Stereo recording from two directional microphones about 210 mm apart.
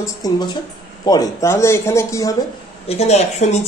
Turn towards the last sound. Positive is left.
turn(degrees=30)  # may be behind; listen again after turning